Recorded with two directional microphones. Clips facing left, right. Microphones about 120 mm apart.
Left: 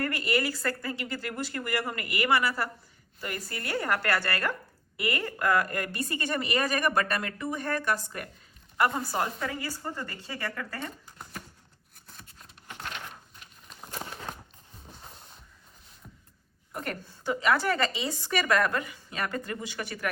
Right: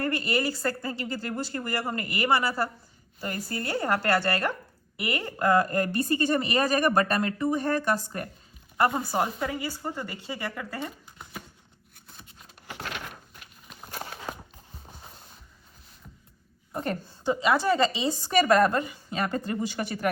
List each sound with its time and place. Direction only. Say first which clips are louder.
0.0 s a woman's voice: right 2 dB; 25° right (ahead or behind)
9.0 s a woman's voice: right 3 dB; 20° right (ahead or behind)
10.8 s a sound: right 3 dB; 5° right (ahead or behind)
13.4 s walk: right 1 dB; 5° right (ahead or behind)
15.0 s a sound: even; centre (ahead or behind)
16.7 s a woman's voice: right 5 dB; 30° right (ahead or behind)
17.4 s a woman's voice: right 3 dB; 20° right (ahead or behind); by 20.1 s 40° right (ahead or behind)